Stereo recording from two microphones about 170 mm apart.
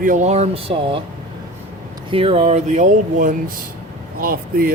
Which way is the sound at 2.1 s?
35° right (ahead or behind).